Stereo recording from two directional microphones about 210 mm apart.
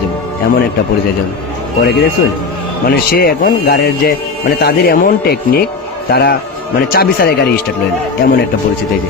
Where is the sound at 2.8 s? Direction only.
45° left (ahead or behind).